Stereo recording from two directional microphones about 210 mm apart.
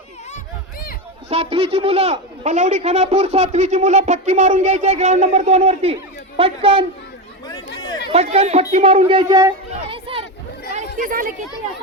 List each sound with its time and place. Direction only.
1.3 s a man's voice: 30° right (ahead or behind)
7.8 s chatter: 20° left (ahead or behind)
8.1 s speech: 30° right (ahead or behind)
9.9 s a sound: 25° right (ahead or behind)
10.7 s chatter: 35° right (ahead or behind)